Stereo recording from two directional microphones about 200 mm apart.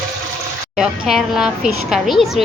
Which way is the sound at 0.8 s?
5° right (ahead or behind).